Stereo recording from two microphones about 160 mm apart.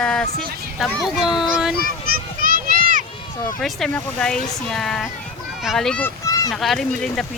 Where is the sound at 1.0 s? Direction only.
Centre (ahead or behind).